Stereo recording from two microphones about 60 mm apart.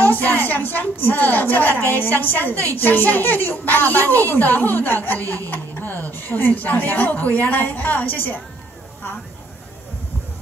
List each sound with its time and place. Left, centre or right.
0.0 s a woman's voice: left
5.5 s a sound: left
6.1 s a woman's voice: left